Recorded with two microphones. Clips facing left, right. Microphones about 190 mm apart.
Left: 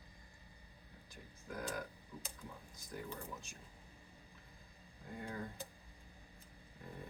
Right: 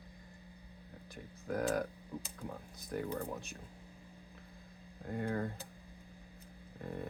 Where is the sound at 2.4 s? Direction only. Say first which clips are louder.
Right 8 dB; 60° right (ahead or behind).